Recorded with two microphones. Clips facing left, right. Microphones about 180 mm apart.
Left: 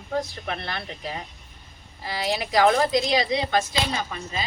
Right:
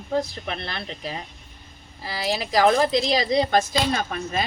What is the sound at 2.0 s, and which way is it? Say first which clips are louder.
Speech: even; 30° right (ahead or behind).